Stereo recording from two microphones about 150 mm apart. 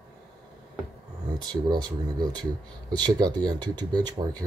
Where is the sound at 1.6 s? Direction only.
30° right (ahead or behind).